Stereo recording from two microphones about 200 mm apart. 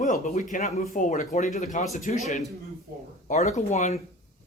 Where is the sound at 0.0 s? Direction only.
40° left (ahead or behind).